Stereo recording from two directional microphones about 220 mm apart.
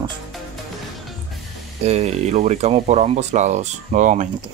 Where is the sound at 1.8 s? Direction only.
30° right (ahead or behind).